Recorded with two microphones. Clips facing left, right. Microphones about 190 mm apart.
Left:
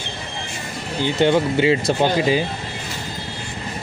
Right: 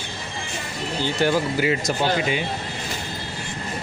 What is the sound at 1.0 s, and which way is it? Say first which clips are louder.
Speech: left 5 dB; 25° left (ahead or behind).